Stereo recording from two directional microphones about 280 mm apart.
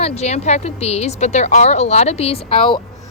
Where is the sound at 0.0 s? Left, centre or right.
Left.